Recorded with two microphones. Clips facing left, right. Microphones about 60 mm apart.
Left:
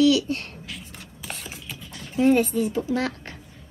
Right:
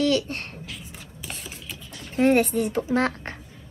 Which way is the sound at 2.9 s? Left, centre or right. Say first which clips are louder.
Right 3 dB; right.